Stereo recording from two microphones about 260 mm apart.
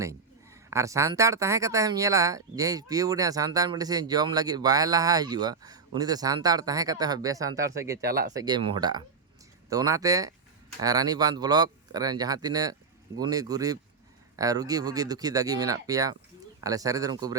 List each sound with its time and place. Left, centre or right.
0.7 s speech: centre